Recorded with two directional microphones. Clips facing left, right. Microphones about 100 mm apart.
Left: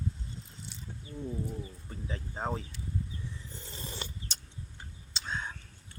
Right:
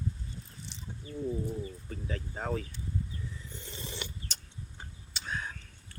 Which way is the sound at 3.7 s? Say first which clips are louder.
Even; 40° left (ahead or behind).